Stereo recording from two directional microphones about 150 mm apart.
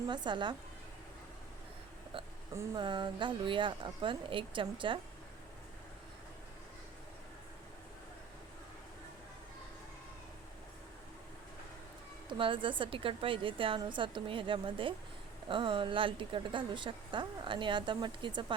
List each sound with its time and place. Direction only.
0.1 s speech: 30° right (ahead or behind)
2.1 s speech: 35° right (ahead or behind)
12.3 s speech: 35° right (ahead or behind)